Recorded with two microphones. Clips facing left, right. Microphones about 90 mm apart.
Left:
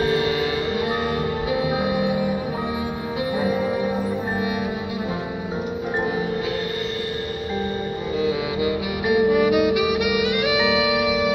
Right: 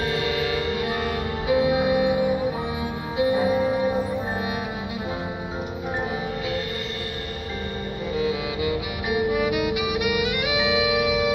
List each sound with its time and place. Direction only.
0.0 s music: 25° left (ahead or behind)
8.3 s music: 25° left (ahead or behind)
9.8 s music: 20° right (ahead or behind)